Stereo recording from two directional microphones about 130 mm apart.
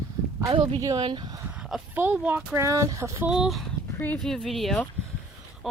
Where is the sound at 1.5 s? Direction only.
10° right (ahead or behind).